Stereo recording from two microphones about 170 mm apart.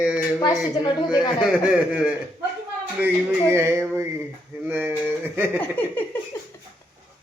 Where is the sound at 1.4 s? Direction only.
5° right (ahead or behind).